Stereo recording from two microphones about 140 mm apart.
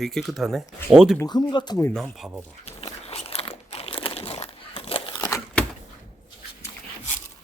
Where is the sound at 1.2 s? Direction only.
30° left (ahead or behind).